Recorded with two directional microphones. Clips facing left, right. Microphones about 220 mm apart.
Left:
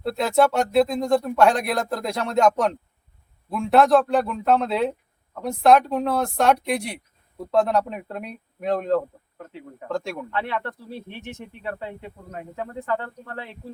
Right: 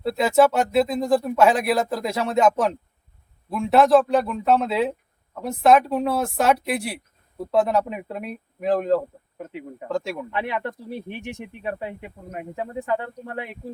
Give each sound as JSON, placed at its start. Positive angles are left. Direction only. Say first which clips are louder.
{"t": 0.0, "sound": "speech", "louder": "right 2 dB", "side_deg": 0}
{"t": 9.4, "sound": "speech", "louder": "right 5 dB", "side_deg": -15}
{"t": 9.9, "sound": "speech", "louder": "right 1 dB", "side_deg": 0}
{"t": 10.3, "sound": "speech", "louder": "even", "side_deg": -15}